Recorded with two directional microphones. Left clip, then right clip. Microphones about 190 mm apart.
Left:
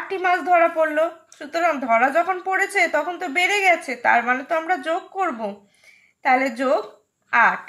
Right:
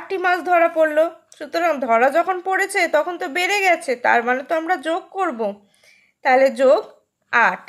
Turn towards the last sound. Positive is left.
turn(degrees=-40)  # may be behind; listen again after turning